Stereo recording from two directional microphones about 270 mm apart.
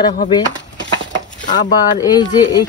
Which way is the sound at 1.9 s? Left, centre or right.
Centre.